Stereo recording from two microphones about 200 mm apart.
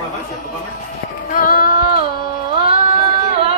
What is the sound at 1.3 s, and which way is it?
Child singing, 45° left (ahead or behind).